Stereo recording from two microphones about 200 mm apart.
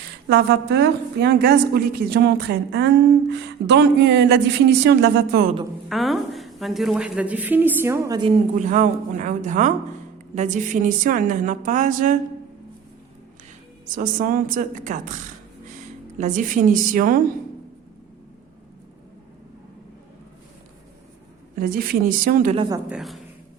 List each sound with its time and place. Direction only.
0.3 s a woman's voice: 55° right (ahead or behind)
5.9 s a woman's voice: centre (ahead or behind); by 8.3 s 15° right (ahead or behind)
8.5 s a woman's voice: 40° right (ahead or behind)
13.9 s a woman's voice: 40° right (ahead or behind)
21.6 s speech: 45° right (ahead or behind)
22.9 s a woman's voice: centre (ahead or behind)